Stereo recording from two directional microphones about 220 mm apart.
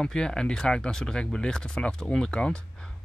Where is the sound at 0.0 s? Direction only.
5° left (ahead or behind).